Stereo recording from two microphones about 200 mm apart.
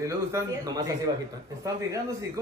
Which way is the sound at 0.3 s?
15° right (ahead or behind).